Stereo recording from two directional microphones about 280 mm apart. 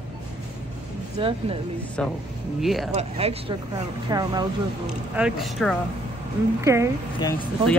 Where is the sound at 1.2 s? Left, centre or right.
Centre.